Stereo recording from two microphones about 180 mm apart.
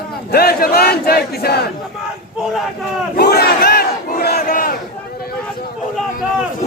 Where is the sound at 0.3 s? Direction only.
60° left (ahead or behind).